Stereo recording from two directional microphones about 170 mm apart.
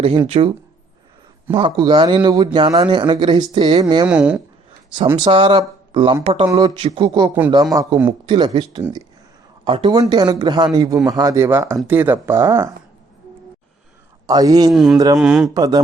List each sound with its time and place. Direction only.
0.3 s a man's voice: 35° right (ahead or behind)
4.1 s speech: 5° right (ahead or behind)
5.1 s speech: 30° right (ahead or behind)
6.5 s a man's voice: 25° right (ahead or behind)
8.3 s a man's voice: 30° right (ahead or behind)
14.3 s a man's voice: 20° right (ahead or behind)
14.7 s speech: centre (ahead or behind)
14.9 s a man's voice: 20° right (ahead or behind)
15.2 s speech: 5° right (ahead or behind)
15.5 s a man's voice: 20° right (ahead or behind)